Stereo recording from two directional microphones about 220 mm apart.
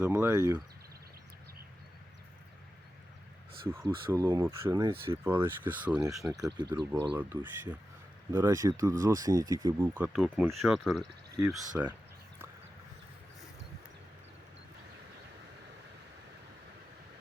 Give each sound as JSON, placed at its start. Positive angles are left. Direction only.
{"t": 0.0, "sound": "speech", "side_deg": -10}
{"t": 3.7, "sound": "speech", "side_deg": -10}
{"t": 6.6, "sound": "speech", "side_deg": -20}
{"t": 7.2, "sound": "speech", "side_deg": -10}
{"t": 11.7, "sound": "speech", "side_deg": -10}